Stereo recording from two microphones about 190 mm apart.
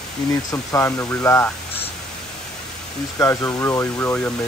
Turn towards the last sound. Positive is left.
turn(degrees=10)  # may be behind; listen again after turning